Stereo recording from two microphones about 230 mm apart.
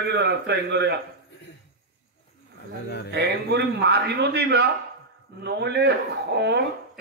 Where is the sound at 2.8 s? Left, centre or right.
Left.